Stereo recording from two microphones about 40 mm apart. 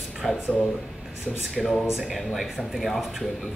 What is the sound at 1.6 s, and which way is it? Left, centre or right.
Speech, centre.